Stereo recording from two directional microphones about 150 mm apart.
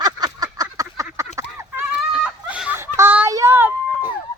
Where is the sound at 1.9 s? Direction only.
5° right (ahead or behind).